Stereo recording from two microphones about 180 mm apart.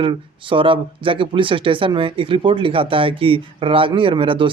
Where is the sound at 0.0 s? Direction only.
30° right (ahead or behind).